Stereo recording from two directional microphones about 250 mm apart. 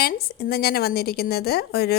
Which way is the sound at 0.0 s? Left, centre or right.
Left.